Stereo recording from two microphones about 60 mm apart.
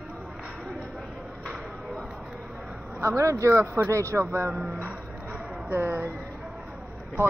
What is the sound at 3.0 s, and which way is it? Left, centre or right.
Speech, right.